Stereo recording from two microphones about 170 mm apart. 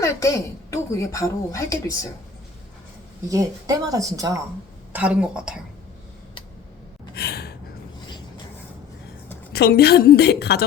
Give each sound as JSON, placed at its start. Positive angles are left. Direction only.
{"t": 0.0, "sound": "speech", "side_deg": 20}
{"t": 3.2, "sound": "speech", "side_deg": -20}
{"t": 4.9, "sound": "a woman's voice", "side_deg": -10}
{"t": 7.2, "sound": "gasp", "side_deg": 65}
{"t": 9.5, "sound": "a woman's voice", "side_deg": 70}